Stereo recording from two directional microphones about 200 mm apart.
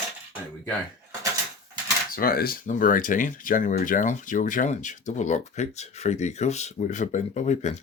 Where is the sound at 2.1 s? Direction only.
45° left (ahead or behind).